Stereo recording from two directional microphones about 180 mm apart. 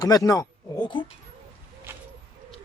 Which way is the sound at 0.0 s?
20° left (ahead or behind).